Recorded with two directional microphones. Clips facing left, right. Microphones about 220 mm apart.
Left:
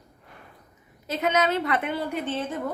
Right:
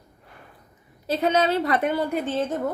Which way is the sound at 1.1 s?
30° right (ahead or behind).